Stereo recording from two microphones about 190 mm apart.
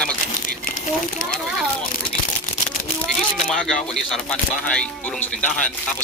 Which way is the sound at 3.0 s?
5° left (ahead or behind).